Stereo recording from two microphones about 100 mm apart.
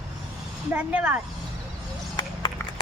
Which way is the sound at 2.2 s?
50° left (ahead or behind).